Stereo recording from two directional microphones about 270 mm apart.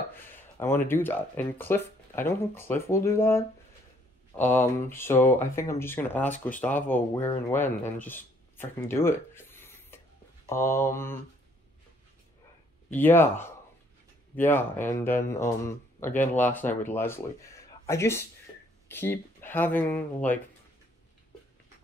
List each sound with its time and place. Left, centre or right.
0.1 s speech: centre
4.6 s speech: centre
12.9 s speech: centre